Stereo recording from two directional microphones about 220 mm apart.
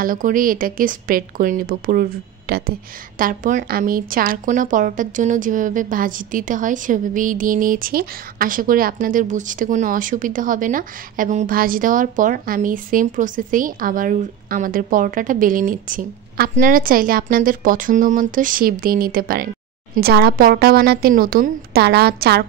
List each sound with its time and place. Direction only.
0.0 s a woman's voice: 40° right (ahead or behind)